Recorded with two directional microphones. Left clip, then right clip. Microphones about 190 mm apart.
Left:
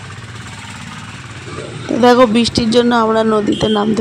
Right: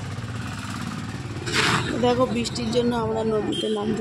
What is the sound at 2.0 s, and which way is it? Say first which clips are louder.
Speech: left 15 dB; 40° left (ahead or behind).